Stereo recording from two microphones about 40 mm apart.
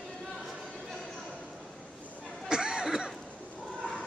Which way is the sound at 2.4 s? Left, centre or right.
Centre.